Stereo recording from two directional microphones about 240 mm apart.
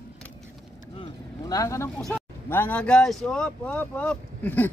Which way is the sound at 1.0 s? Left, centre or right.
Centre.